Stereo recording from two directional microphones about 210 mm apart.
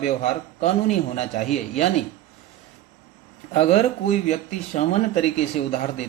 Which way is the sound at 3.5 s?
30° left (ahead or behind).